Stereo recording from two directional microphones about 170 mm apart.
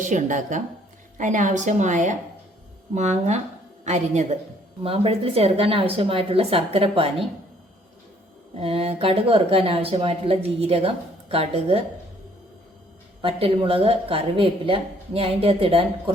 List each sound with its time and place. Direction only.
0.0 s a woman's voice: 45° right (ahead or behind)
8.5 s speech: 35° right (ahead or behind)
13.2 s speech: 30° right (ahead or behind)